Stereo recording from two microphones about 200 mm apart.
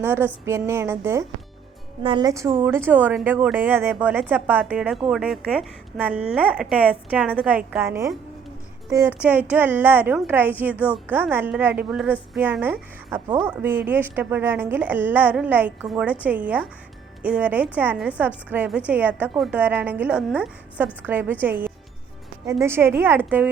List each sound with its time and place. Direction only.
0.0 s a woman's voice: 10° right (ahead or behind)